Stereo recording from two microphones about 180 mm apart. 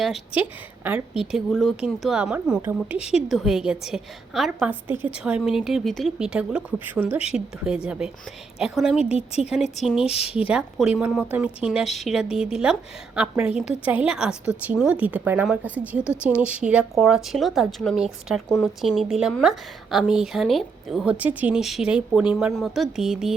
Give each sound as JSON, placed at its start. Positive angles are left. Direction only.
{"t": 0.0, "sound": "a woman's voice", "side_deg": 0}
{"t": 9.1, "sound": "speech", "side_deg": 35}
{"t": 10.5, "sound": "a woman's voice", "side_deg": -5}